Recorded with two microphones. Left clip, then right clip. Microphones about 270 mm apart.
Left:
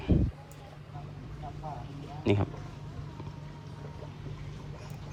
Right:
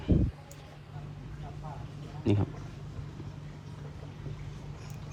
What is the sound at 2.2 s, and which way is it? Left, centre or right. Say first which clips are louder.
Speech: left 2 dB; right.